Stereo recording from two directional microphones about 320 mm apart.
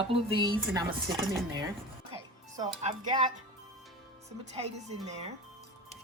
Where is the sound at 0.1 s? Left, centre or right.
Centre.